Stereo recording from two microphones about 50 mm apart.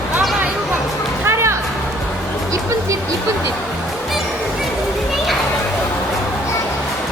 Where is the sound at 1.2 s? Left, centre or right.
Right.